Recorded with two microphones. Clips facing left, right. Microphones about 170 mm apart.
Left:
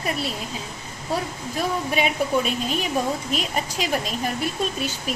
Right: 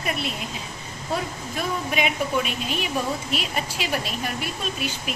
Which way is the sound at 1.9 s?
35° left (ahead or behind).